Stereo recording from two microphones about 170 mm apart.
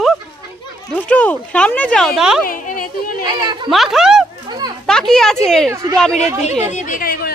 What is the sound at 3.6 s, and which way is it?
Speech, centre (ahead or behind).